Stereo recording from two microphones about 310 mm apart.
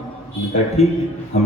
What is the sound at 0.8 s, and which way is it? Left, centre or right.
Speech, centre.